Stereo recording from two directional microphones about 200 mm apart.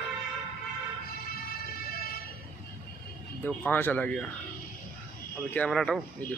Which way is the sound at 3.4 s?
10° left (ahead or behind).